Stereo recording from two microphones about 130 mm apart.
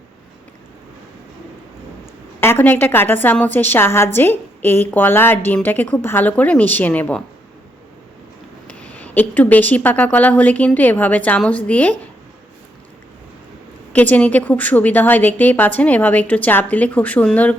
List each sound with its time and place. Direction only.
2.4 s a woman's voice: 15° left (ahead or behind)
8.8 s a woman's voice: 10° left (ahead or behind)
13.9 s a woman's voice: 10° left (ahead or behind)